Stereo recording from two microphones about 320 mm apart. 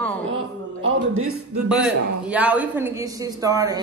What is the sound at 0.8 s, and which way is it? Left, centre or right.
Speech, right.